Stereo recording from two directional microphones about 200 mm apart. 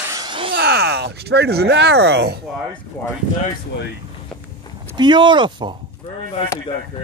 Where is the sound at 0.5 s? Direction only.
55° right (ahead or behind).